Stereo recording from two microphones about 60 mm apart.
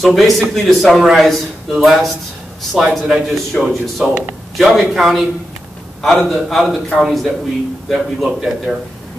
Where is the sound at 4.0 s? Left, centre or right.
Right.